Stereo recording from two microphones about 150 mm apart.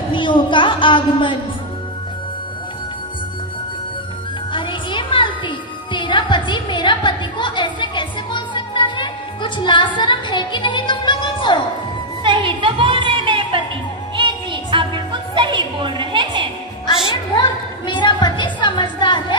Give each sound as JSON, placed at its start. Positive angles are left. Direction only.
{"t": 0.1, "sound": "a woman's voice", "side_deg": 35}
{"t": 4.5, "sound": "music", "side_deg": 30}
{"t": 12.2, "sound": "a sound", "side_deg": -35}
{"t": 14.1, "sound": "music", "side_deg": -35}
{"t": 16.8, "sound": "music", "side_deg": 30}
{"t": 17.8, "sound": "a sound", "side_deg": 30}